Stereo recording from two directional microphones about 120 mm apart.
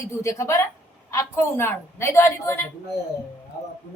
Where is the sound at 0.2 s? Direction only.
25° left (ahead or behind).